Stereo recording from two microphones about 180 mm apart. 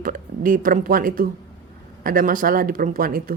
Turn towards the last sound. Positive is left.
turn(degrees=-50)  # may be behind; listen again after turning